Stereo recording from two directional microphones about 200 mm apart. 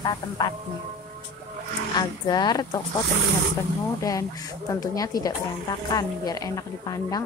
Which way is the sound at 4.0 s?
15° left (ahead or behind).